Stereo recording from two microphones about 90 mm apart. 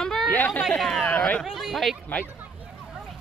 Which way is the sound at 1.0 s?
15° left (ahead or behind).